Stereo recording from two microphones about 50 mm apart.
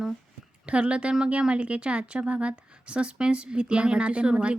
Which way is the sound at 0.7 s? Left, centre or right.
Right.